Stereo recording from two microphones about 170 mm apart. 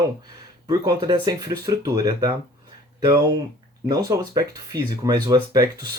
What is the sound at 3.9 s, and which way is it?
Speech, 20° right (ahead or behind).